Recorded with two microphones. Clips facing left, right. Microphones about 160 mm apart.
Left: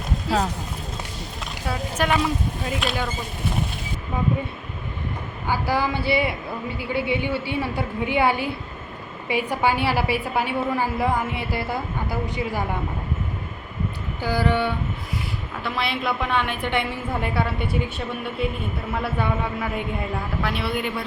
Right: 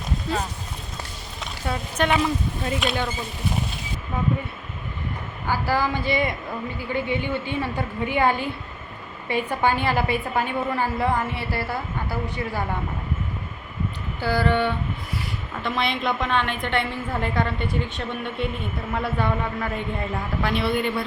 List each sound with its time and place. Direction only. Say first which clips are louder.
0.3 s speech: left 5 dB; 75° left (ahead or behind)
1.4 s speech: even; centre (ahead or behind)
5.5 s a woman's voice: even; 15° left (ahead or behind)
14.2 s a woman's voice: even; 15° left (ahead or behind)